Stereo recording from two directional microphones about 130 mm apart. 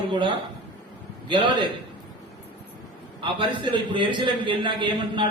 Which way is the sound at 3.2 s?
40° right (ahead or behind).